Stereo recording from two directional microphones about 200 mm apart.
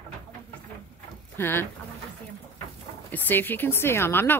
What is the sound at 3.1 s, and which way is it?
Speech, 10° left (ahead or behind).